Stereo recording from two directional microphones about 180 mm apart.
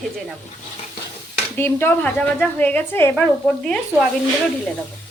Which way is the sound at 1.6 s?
10° left (ahead or behind).